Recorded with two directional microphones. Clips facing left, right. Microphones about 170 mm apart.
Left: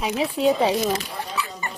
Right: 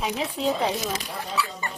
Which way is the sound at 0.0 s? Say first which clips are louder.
Left 5 dB; 5° left (ahead or behind).